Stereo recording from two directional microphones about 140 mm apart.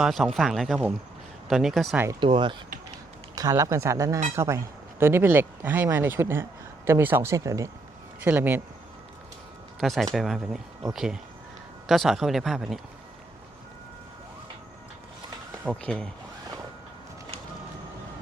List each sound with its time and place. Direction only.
0.0 s speech: centre (ahead or behind)
2.2 s speech: 35° right (ahead or behind)
3.3 s speech: 25° right (ahead or behind)
9.8 s speech: centre (ahead or behind)
15.7 s speech: 5° left (ahead or behind)